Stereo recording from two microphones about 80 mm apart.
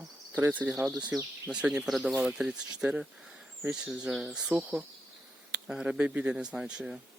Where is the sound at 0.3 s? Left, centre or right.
Right.